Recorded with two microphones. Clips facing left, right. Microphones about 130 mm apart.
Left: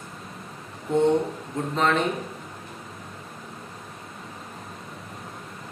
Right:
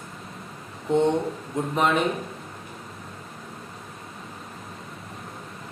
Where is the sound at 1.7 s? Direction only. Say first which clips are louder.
Even; 15° right (ahead or behind).